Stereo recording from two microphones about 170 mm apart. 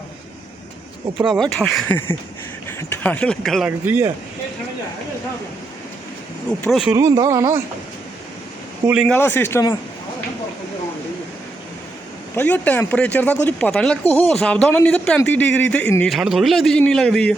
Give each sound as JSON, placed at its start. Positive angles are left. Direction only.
{"t": 1.3, "sound": "a man's voice", "side_deg": 0}
{"t": 3.8, "sound": "speech", "side_deg": -15}
{"t": 6.7, "sound": "a man's voice", "side_deg": 0}
{"t": 6.9, "sound": "speech", "side_deg": -20}
{"t": 9.0, "sound": "speech", "side_deg": 10}
{"t": 12.4, "sound": "a man's voice", "side_deg": 10}